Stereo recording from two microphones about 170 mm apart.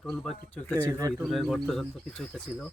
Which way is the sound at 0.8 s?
15° right (ahead or behind).